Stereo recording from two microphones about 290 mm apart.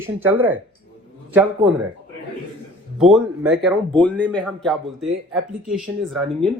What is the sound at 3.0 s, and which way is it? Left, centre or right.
Speech, centre.